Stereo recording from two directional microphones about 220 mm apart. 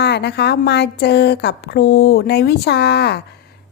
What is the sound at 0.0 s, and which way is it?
A woman's voice, 50° left (ahead or behind).